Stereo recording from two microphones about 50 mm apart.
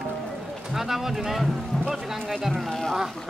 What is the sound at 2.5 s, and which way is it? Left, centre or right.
Speech, centre.